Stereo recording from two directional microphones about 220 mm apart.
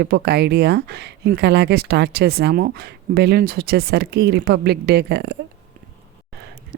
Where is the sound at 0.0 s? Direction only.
45° right (ahead or behind).